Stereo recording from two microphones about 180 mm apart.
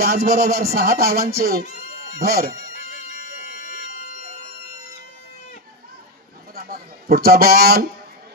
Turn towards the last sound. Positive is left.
turn(degrees=-60)  # may be behind; listen again after turning